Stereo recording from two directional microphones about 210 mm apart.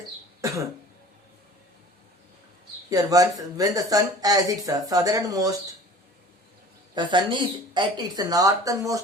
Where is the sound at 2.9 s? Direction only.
15° right (ahead or behind).